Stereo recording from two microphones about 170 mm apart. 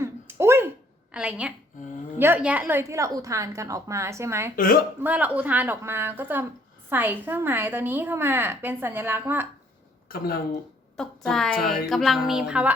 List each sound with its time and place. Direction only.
0.0 s a sound: 15° right (ahead or behind)
1.1 s a woman's voice: 5° right (ahead or behind)
4.5 s a woman's voice: 55° left (ahead or behind)
4.9 s a woman's voice: 10° right (ahead or behind)
10.1 s speech: 60° left (ahead or behind)
10.9 s music: 5° left (ahead or behind)